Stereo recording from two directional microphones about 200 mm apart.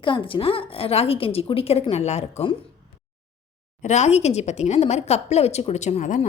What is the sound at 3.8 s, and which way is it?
A woman's voice, 35° left (ahead or behind).